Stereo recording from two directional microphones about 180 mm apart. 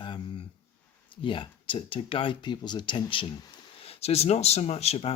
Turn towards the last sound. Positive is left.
turn(degrees=35)  # may be behind; listen again after turning